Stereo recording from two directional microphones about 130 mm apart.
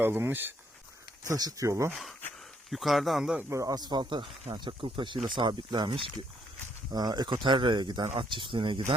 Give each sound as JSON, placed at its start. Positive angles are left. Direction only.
{"t": 0.0, "sound": "speech", "side_deg": -15}
{"t": 1.2, "sound": "speech", "side_deg": -30}
{"t": 1.9, "sound": "speech", "side_deg": 0}
{"t": 3.5, "sound": "speech", "side_deg": -25}